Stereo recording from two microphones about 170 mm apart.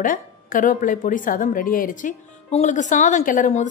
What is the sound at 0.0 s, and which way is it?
A woman's voice, 50° left (ahead or behind).